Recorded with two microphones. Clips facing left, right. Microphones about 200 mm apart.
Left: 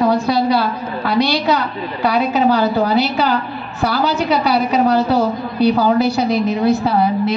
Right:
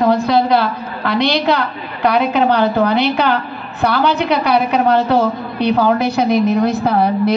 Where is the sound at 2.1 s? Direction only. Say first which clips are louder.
Right 1 dB; 60° right (ahead or behind).